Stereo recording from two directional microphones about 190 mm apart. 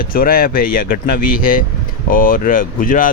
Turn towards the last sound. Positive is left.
turn(degrees=45)  # may be behind; listen again after turning